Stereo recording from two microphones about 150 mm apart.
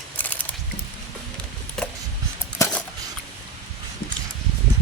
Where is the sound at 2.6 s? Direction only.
20° left (ahead or behind).